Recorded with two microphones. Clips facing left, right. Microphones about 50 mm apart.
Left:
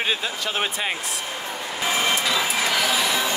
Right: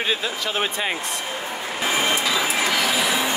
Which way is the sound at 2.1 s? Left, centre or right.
Centre.